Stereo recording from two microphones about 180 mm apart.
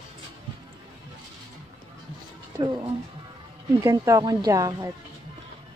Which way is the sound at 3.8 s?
15° right (ahead or behind).